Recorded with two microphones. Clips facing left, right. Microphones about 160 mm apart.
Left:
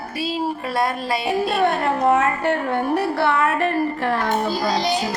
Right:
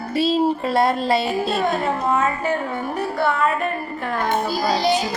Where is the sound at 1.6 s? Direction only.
70° left (ahead or behind).